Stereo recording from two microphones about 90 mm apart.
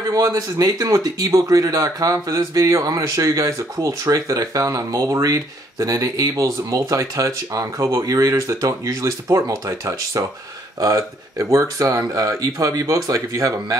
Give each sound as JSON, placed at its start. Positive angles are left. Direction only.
{"t": 0.1, "sound": "speech", "side_deg": -40}